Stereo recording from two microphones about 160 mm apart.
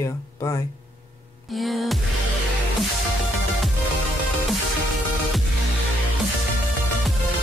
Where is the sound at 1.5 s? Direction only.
Centre (ahead or behind).